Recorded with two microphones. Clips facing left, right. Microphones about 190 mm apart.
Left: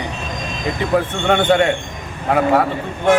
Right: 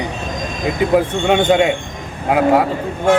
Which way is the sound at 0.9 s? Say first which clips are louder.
Right 1 dB; 15° right (ahead or behind).